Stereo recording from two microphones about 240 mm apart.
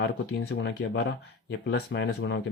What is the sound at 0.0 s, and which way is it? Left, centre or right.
Speech, left.